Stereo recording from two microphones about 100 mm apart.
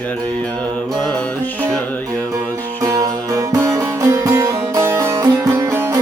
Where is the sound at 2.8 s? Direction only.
35° right (ahead or behind).